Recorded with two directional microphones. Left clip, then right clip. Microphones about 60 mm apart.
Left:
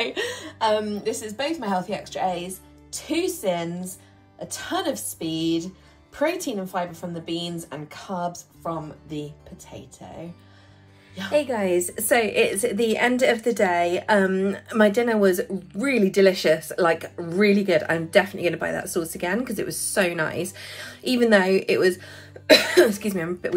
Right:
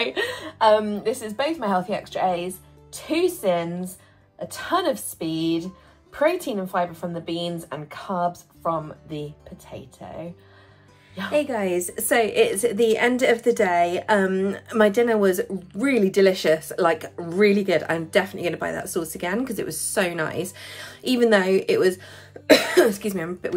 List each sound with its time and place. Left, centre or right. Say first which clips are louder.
0.0 s a woman's voice: right 2 dB; left
11.3 s a woman's voice: left 1 dB; right
22.8 s speech: even; right